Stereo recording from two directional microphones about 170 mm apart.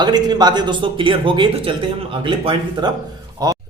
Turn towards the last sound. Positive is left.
turn(degrees=-20)  # may be behind; listen again after turning